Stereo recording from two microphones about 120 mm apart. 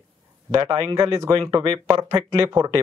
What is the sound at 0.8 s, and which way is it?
Speech, 30° right (ahead or behind).